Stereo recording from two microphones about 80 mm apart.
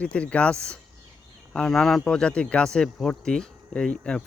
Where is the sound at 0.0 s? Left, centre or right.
Centre.